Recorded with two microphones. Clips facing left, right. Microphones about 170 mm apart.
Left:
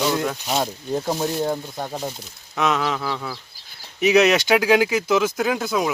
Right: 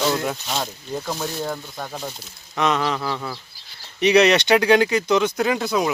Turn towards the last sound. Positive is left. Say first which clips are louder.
# right 1 dB
turn(degrees=0)  # may be behind; listen again after turning